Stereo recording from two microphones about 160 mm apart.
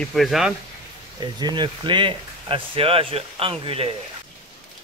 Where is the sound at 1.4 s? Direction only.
25° right (ahead or behind).